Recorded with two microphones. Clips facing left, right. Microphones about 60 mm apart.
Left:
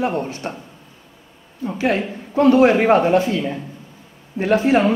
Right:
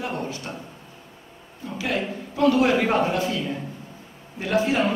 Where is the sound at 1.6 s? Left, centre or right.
Left.